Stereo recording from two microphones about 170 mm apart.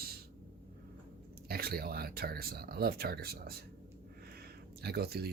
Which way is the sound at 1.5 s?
65° right (ahead or behind).